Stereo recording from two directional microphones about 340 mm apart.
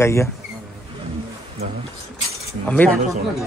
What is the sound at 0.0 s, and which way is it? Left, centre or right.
Speech, centre.